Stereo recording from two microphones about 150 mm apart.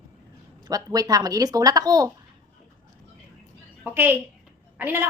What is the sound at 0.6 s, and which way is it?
A woman's voice, 25° right (ahead or behind).